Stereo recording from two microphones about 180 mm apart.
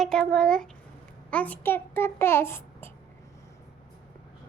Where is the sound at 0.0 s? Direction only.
5° left (ahead or behind).